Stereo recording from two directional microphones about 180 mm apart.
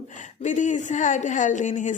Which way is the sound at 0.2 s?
40° left (ahead or behind).